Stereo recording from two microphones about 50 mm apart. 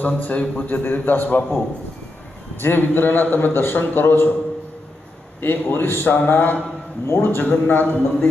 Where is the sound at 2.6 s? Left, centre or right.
Left.